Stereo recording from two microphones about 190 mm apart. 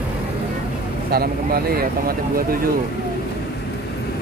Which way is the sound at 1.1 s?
50° right (ahead or behind).